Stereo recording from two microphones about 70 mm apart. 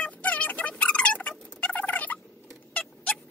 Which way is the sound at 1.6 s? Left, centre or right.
Left.